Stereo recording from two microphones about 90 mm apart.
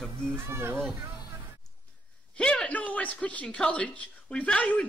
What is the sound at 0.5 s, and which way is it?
Speech, 30° right (ahead or behind).